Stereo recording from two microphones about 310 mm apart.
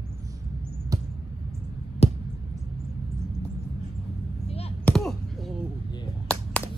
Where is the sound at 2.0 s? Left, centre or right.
Centre.